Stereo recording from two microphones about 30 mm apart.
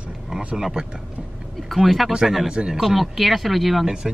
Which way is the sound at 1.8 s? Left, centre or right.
Centre.